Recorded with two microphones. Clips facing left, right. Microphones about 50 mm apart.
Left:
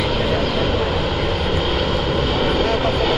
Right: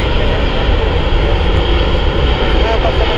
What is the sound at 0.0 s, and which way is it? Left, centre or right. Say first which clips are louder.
Vehicle: right 3 dB; right.